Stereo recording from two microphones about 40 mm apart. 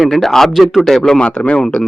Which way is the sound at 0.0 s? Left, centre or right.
Centre.